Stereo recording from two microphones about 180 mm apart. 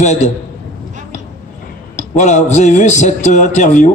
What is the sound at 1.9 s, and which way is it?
A man's voice, 40° left (ahead or behind).